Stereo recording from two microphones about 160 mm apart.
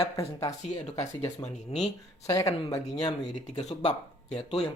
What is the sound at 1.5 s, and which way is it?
Speech, 45° left (ahead or behind).